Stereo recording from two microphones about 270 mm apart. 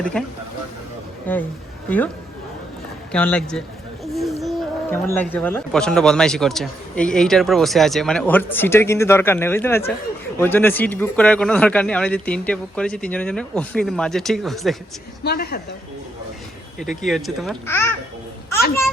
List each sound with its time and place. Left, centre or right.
0.0 s speech: centre
1.3 s speech: centre
3.1 s speech: centre
4.0 s a sound: centre
4.4 s speech: centre
15.2 s a woman's voice: left
16.8 s speech: centre